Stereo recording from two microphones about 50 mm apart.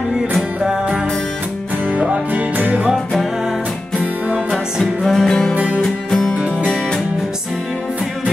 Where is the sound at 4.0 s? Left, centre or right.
Right.